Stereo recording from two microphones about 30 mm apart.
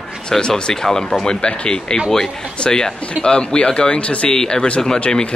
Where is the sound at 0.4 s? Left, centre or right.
Left.